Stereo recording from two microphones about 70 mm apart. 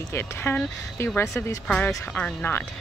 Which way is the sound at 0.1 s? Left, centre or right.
Left.